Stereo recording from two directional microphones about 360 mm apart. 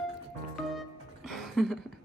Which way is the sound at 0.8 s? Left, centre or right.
Centre.